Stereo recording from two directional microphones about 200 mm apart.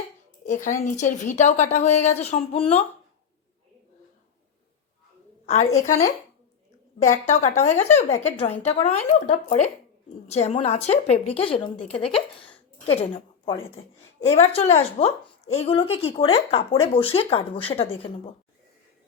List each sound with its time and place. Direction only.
0.4 s a woman's voice: 40° left (ahead or behind)
5.5 s a woman's voice: 35° left (ahead or behind)